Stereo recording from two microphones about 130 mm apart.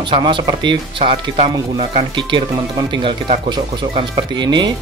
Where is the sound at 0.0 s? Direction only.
40° right (ahead or behind).